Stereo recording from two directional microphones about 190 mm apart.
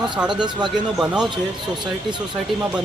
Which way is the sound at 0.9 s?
5° right (ahead or behind).